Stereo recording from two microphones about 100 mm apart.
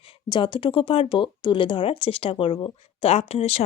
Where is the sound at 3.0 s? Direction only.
90° left.